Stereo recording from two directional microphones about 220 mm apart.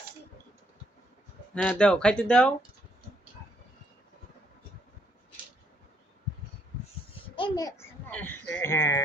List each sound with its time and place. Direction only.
1.6 s speech: 5° left (ahead or behind)
7.2 s babbling: 20° left (ahead or behind)
8.1 s a sound: 10° left (ahead or behind)